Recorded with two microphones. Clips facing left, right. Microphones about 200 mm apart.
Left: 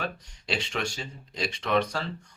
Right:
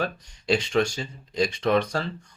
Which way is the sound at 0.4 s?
40° right (ahead or behind).